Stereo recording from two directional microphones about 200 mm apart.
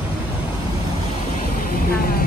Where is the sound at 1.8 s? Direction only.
45° left (ahead or behind).